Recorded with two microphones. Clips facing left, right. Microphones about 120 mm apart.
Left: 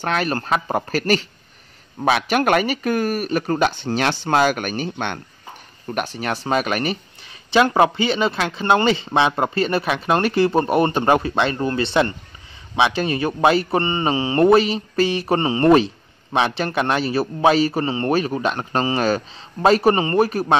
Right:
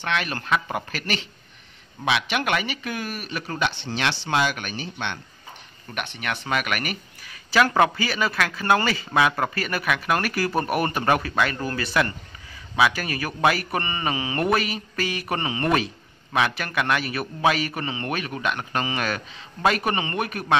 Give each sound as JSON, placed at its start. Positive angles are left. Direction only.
{"t": 0.0, "sound": "a man's voice", "side_deg": 40}
{"t": 5.9, "sound": "a man's voice", "side_deg": 35}